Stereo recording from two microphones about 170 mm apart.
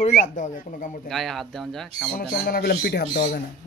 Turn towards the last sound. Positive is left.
turn(degrees=65)  # may be behind; listen again after turning